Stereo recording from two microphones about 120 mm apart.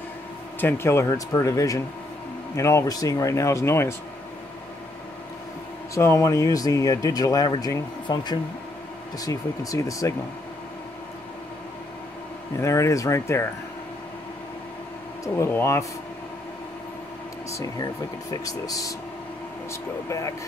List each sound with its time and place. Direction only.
0.6 s speech: 20° left (ahead or behind)
5.9 s speech: 25° left (ahead or behind)
12.5 s speech: 25° left (ahead or behind)
15.2 s speech: 25° left (ahead or behind)
18.3 s speech: 30° left (ahead or behind)